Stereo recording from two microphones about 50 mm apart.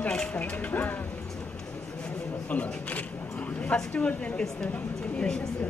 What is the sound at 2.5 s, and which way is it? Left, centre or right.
Speech, left.